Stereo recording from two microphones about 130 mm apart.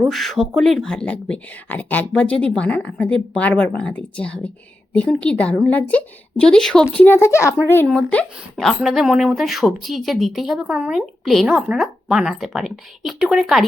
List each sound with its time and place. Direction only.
0.0 s speech: centre (ahead or behind); by 7.9 s 20° left (ahead or behind)
7.9 s speech: 5° left (ahead or behind)